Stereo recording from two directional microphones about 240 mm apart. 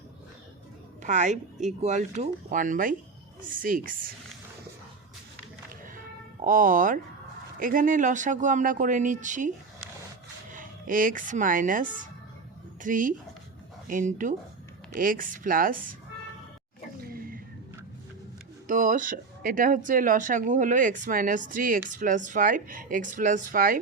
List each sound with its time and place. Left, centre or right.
1.0 s speech: right
6.4 s speech: right
10.5 s speech: right
17.0 s a sound: right
18.7 s speech: right